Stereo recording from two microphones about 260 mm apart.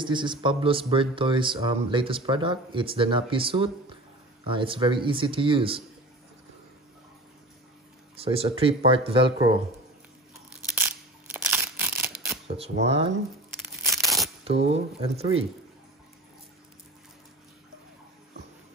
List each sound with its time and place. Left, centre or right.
0.0 s speech: centre
8.2 s speech: right
10.7 s crushing: centre
11.4 s a sound: centre
12.4 s speech: right
13.8 s tearing: centre
15.0 s speech: right